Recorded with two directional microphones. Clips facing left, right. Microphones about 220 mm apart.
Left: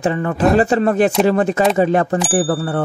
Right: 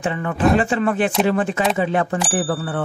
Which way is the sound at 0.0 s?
40° left (ahead or behind).